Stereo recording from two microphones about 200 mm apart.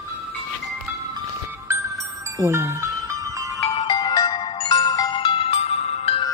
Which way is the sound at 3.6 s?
20° left (ahead or behind).